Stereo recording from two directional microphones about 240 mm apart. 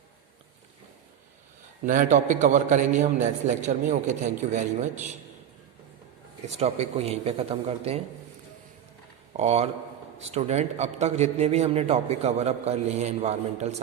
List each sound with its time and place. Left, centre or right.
1.8 s a man's voice: right
6.5 s a man's voice: right
9.4 s a man's voice: right